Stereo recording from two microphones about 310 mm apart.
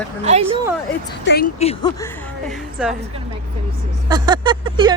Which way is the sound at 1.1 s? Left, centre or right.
Left.